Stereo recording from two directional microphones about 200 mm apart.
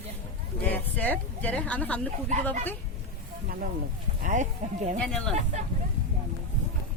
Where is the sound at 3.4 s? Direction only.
45° right (ahead or behind).